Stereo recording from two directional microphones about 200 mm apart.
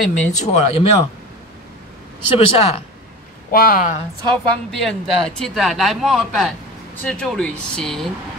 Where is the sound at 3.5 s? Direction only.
45° left (ahead or behind).